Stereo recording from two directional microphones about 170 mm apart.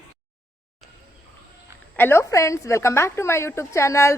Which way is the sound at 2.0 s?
15° left (ahead or behind).